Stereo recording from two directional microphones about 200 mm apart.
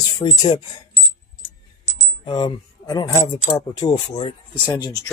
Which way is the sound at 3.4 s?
30° left (ahead or behind).